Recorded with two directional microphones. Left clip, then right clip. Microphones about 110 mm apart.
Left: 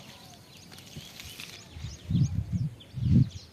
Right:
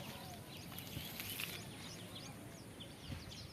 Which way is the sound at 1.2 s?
45° left (ahead or behind).